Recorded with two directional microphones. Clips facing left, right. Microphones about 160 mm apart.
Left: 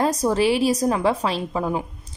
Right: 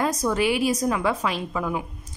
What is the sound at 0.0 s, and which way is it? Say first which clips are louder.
Speech: left 3 dB; 30° left (ahead or behind).